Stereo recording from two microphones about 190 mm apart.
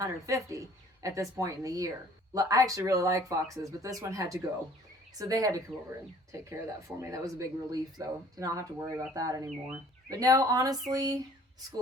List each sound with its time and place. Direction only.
0.0 s speech: 15° right (ahead or behind)